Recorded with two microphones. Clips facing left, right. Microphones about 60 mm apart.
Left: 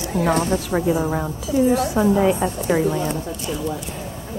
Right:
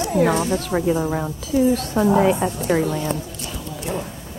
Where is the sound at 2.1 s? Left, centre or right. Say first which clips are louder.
Right 1 dB; centre.